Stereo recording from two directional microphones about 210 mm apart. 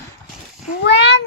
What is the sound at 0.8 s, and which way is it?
Speech, 55° left (ahead or behind).